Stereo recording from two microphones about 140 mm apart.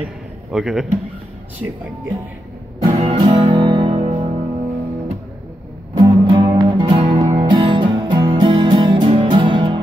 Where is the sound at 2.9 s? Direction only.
40° right (ahead or behind).